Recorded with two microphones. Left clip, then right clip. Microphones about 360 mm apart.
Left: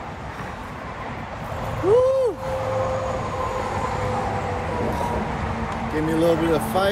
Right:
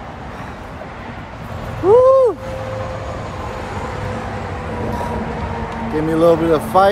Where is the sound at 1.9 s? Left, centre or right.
Right.